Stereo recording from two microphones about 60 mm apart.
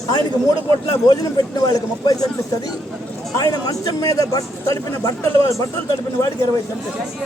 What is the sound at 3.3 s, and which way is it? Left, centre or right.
Speech, left.